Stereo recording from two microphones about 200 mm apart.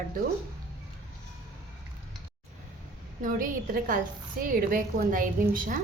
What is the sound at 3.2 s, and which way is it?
A woman's voice, 45° right (ahead or behind).